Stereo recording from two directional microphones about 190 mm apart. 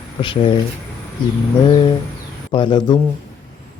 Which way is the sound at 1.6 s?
25° left (ahead or behind).